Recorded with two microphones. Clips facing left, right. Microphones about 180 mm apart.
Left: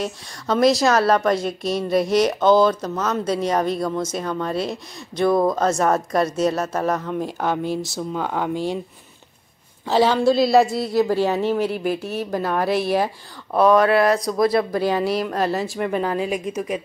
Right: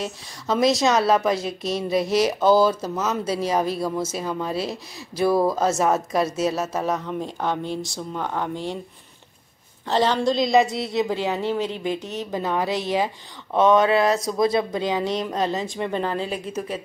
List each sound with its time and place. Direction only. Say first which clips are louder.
0.0 s a woman's voice: left 3 dB; centre (ahead or behind)
9.8 s a woman's voice: left 4 dB; 5° left (ahead or behind)
12.3 s a woman's voice: left 2 dB; 15° right (ahead or behind)
15.6 s speech: left 3 dB; 5° left (ahead or behind)